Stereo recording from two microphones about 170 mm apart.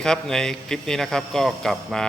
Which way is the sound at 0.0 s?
5° left (ahead or behind).